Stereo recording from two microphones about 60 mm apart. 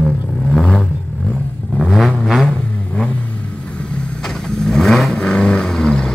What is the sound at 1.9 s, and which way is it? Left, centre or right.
Vehicle, centre.